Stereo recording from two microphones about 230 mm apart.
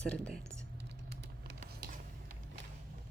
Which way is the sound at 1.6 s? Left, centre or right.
Right.